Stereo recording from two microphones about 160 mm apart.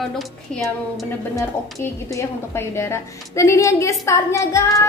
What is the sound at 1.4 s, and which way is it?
A woman's voice, 20° left (ahead or behind).